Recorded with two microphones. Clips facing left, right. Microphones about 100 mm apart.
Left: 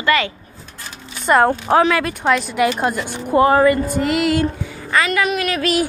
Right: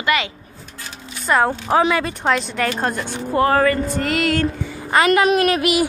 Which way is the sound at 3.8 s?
5° left (ahead or behind).